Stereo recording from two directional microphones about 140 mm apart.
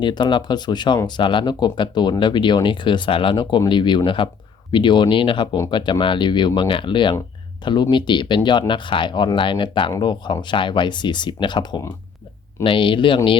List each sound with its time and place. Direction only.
0.0 s speech: 35° left (ahead or behind)